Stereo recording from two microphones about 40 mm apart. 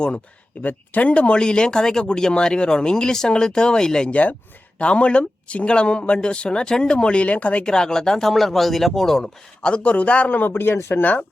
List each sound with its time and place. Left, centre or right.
0.6 s speech: left
1.1 s speech: left
4.1 s speech: left
4.8 s speech: left
7.6 s speech: centre
9.2 s speech: left
10.3 s speech: left
11.0 s speech: left